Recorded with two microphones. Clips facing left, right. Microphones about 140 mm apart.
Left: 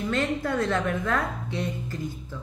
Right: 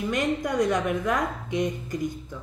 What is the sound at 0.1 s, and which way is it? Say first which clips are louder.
A woman's voice: even; 15° right (ahead or behind).